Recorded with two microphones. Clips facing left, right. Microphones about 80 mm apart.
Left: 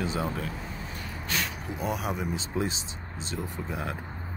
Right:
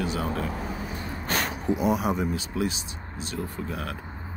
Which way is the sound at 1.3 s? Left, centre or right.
Right.